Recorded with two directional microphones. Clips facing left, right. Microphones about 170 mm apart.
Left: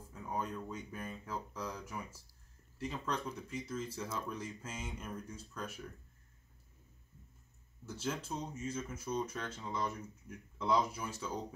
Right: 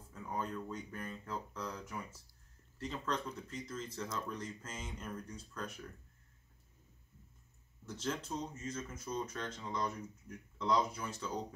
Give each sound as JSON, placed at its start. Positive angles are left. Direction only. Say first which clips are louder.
{"t": 0.1, "sound": "speech", "louder": "even", "side_deg": 10}
{"t": 7.8, "sound": "speech", "louder": "even", "side_deg": 10}